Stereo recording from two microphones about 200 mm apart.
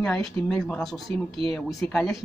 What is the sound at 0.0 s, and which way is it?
Speech, 5° left (ahead or behind).